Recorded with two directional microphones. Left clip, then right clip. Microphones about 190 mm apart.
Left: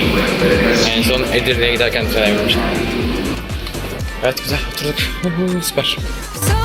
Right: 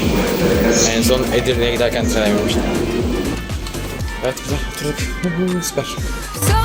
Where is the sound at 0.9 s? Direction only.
35° right (ahead or behind).